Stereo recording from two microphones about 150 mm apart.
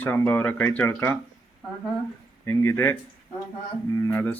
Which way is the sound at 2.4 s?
20° left (ahead or behind).